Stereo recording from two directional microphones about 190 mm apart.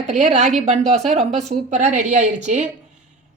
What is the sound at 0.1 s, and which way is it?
A woman's voice, 40° right (ahead or behind).